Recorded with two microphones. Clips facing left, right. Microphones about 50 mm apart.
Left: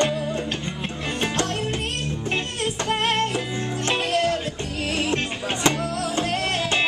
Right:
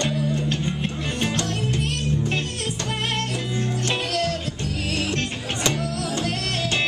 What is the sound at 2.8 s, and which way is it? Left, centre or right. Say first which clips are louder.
Music: left 5 dB; centre.